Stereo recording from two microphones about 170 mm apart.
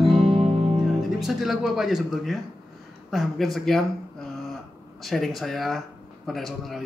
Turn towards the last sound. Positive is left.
turn(degrees=0)  # may be behind; listen again after turning